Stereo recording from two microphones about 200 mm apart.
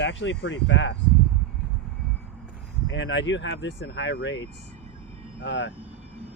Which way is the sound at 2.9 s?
70° left (ahead or behind).